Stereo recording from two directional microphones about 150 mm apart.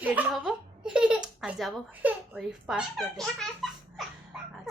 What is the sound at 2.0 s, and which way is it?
A woman's voice, 10° right (ahead or behind).